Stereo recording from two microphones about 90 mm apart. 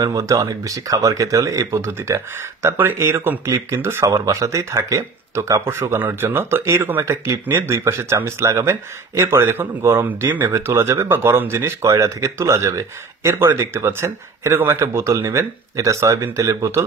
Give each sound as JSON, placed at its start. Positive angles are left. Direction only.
{"t": 0.0, "sound": "speech", "side_deg": -40}
{"t": 10.0, "sound": "speech", "side_deg": -20}
{"t": 10.5, "sound": "speech", "side_deg": -30}